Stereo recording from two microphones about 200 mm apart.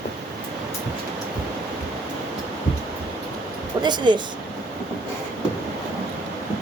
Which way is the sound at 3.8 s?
20° right (ahead or behind).